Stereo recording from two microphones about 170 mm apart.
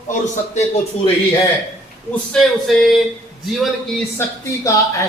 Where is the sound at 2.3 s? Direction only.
Centre (ahead or behind).